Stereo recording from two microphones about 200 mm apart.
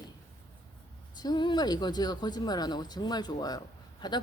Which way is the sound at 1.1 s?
20° left (ahead or behind).